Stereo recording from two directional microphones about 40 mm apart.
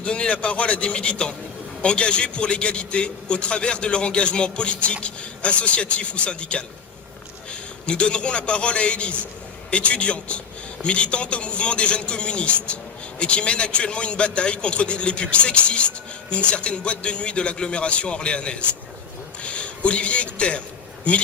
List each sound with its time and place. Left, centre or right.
0.0 s a man's voice: left
7.9 s a man's voice: left